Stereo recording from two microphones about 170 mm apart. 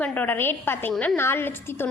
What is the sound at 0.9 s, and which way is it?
Speech, centre (ahead or behind).